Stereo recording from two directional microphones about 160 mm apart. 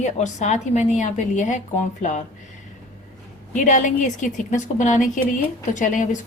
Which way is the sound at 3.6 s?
50° left (ahead or behind).